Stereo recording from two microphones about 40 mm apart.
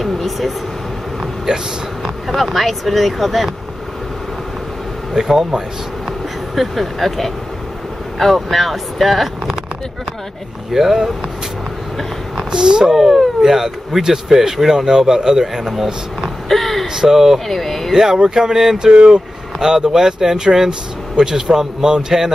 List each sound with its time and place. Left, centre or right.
0.0 s speech: centre
1.2 s vehicle: centre
2.2 s speech: centre
5.1 s speech: centre
10.7 s speech: centre
12.4 s speech: centre
12.9 s speech: centre
16.4 s a sound: centre
16.8 s speech: centre
17.5 s speech: centre
17.9 s speech: centre
18.9 s speech: right
19.6 s speech: centre